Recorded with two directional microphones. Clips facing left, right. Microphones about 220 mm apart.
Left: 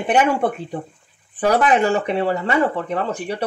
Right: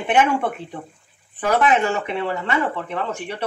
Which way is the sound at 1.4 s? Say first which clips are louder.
Left 2 dB; 40° left (ahead or behind).